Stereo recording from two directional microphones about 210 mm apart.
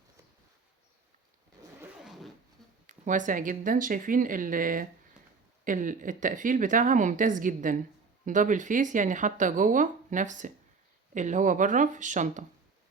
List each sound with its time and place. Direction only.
2.8 s speech: 35° right (ahead or behind)